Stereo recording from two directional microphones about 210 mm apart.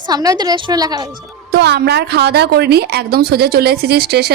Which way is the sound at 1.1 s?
50° right (ahead or behind).